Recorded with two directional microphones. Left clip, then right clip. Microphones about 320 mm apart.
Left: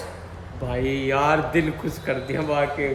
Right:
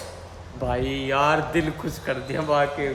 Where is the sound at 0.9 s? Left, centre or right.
Centre.